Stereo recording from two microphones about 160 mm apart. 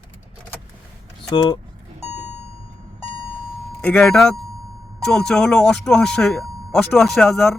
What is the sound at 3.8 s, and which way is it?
Speech, 5° left (ahead or behind).